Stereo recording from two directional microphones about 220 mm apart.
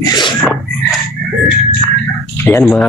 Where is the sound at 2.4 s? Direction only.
5° left (ahead or behind).